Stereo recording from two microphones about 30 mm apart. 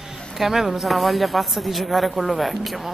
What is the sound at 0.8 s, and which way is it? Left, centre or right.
A woman's voice, centre.